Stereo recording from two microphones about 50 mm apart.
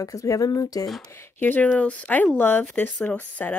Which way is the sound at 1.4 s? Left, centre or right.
Left.